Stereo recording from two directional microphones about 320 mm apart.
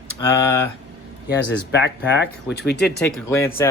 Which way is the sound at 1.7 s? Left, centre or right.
Left.